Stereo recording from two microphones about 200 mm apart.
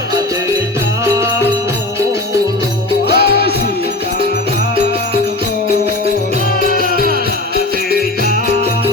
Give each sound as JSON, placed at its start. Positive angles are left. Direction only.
{"t": 1.0, "sound": "music", "side_deg": -15}
{"t": 3.1, "sound": "music", "side_deg": 55}